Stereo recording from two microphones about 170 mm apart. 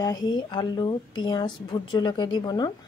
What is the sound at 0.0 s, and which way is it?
A woman's voice, 25° left (ahead or behind).